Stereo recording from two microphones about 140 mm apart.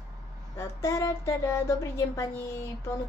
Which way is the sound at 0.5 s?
20° left (ahead or behind).